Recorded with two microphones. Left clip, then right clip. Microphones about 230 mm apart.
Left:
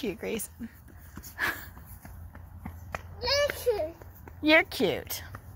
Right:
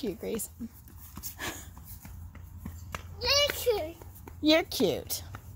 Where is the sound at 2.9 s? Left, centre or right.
Centre.